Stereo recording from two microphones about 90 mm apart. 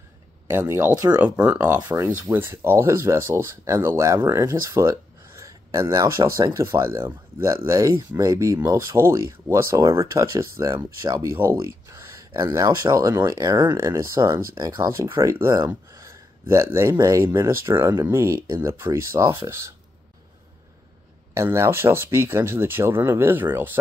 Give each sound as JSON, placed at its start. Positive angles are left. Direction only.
{"t": 0.5, "sound": "speech", "side_deg": -30}
{"t": 1.8, "sound": "speech", "side_deg": -45}
{"t": 2.3, "sound": "speech", "side_deg": -25}
{"t": 13.7, "sound": "speech", "side_deg": -35}
{"t": 15.9, "sound": "gasp", "side_deg": -35}
{"t": 16.9, "sound": "speech", "side_deg": -40}
{"t": 17.2, "sound": "speech", "side_deg": -30}
{"t": 21.4, "sound": "speech", "side_deg": -30}